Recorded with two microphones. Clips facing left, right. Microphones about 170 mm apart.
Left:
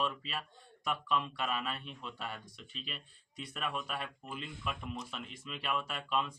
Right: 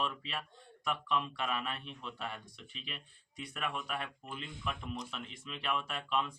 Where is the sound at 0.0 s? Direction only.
Centre (ahead or behind).